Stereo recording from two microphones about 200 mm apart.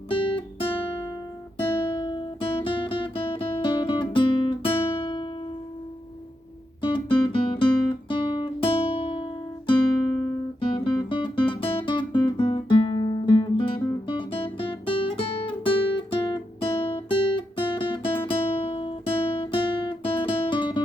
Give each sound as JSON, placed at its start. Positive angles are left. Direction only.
{"t": 0.1, "sound": "guitar", "side_deg": 25}
{"t": 6.8, "sound": "guitar", "side_deg": 25}